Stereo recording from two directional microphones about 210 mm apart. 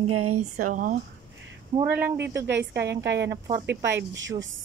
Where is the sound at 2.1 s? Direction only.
55° right (ahead or behind).